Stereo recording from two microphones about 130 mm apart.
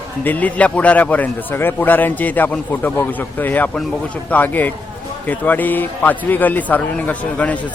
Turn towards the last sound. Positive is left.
turn(degrees=10)  # may be behind; listen again after turning